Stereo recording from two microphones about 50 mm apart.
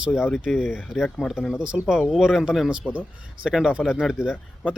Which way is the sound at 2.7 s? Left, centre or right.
Right.